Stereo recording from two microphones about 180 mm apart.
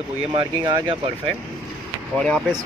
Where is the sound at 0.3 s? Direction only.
30° right (ahead or behind).